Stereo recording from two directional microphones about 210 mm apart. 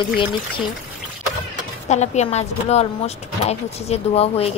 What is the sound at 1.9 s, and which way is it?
A woman's voice, 30° left (ahead or behind).